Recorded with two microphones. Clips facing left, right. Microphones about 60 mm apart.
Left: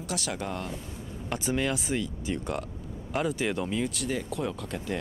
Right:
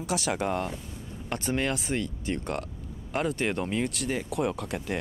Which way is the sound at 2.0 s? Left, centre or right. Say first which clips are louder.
Right 1 dB; right.